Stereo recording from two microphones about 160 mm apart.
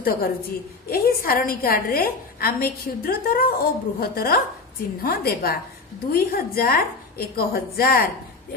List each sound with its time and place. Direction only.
0.0 s a woman's voice: 70° left (ahead or behind)